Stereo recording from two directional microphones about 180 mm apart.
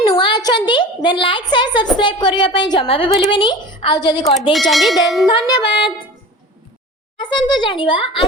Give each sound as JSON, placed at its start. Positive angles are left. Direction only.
{"t": 0.0, "sound": "a sound", "side_deg": 25}
{"t": 2.0, "sound": "a woman's voice", "side_deg": 25}
{"t": 4.5, "sound": "speech", "side_deg": 0}
{"t": 5.5, "sound": "a woman's voice", "side_deg": 25}
{"t": 7.2, "sound": "a woman's voice", "side_deg": 25}